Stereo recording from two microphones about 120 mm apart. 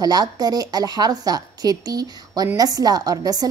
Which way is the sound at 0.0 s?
35° right (ahead or behind).